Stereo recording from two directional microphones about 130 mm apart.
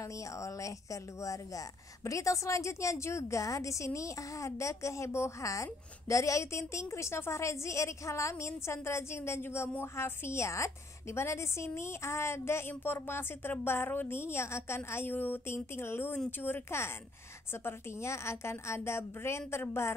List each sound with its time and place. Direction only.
0.0 s a woman's voice: 25° left (ahead or behind)